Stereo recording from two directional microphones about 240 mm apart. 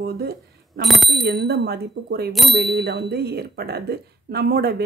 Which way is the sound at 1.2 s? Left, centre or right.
Right.